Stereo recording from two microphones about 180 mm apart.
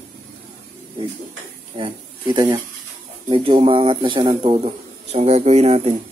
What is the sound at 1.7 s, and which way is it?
A man's voice, 25° right (ahead or behind).